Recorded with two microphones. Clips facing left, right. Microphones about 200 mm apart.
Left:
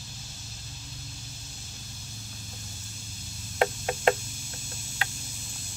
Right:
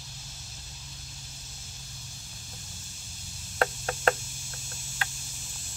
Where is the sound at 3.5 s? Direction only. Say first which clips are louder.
Left 3 dB; 15° left (ahead or behind).